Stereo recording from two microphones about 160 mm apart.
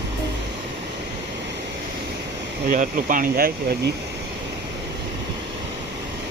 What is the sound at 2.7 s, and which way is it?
Speech, 55° right (ahead or behind).